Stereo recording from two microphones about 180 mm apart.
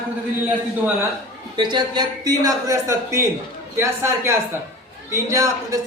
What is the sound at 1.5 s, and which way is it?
A man's voice, 25° right (ahead or behind).